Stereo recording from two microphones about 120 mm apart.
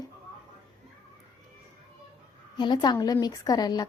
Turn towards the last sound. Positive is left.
turn(degrees=35)  # may be behind; listen again after turning